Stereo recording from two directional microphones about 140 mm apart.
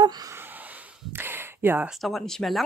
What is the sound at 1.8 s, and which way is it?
Speech, centre (ahead or behind).